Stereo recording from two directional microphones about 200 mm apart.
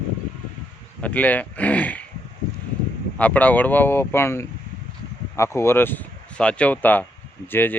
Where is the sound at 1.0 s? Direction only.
5° left (ahead or behind).